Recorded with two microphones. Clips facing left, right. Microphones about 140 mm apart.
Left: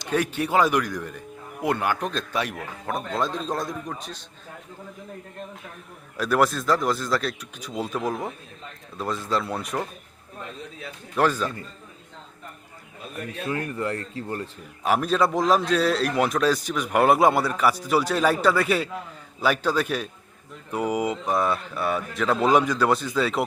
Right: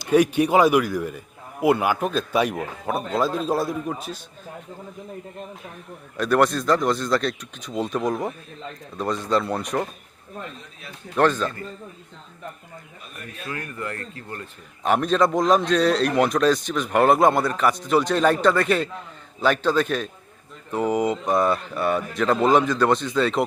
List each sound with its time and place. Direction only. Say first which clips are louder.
0.0 s speech: right 7 dB; 15° right (ahead or behind)
2.4 s speech: right 6 dB; 15° right (ahead or behind)
3.1 s speech: right 5 dB; 5° right (ahead or behind)
6.1 s a man's voice: right 2 dB; 5° left (ahead or behind)
11.2 s a man's voice: right 3 dB; 10° left (ahead or behind)
13.5 s speech: left 4 dB; 25° left (ahead or behind)
14.8 s a man's voice: right 2 dB; 5° left (ahead or behind)